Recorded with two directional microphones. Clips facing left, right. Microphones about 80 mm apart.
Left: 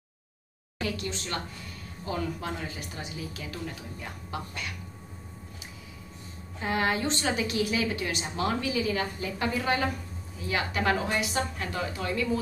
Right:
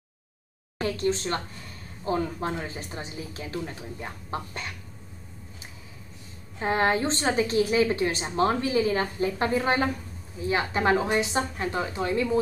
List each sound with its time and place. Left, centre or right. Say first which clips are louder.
0.7 s a woman's voice: right 7 dB; right
6.6 s a woman's voice: right 4 dB; right